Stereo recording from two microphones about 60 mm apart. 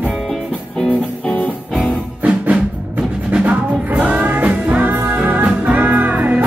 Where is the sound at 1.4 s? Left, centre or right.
Centre.